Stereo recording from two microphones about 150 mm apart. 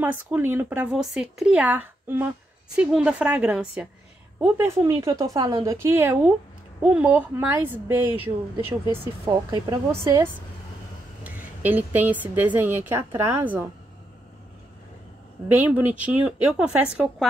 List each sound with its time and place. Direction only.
0.0 s a woman's voice: 10° right (ahead or behind)
11.2 s a woman's voice: 10° right (ahead or behind)
15.4 s a woman's voice: 10° right (ahead or behind)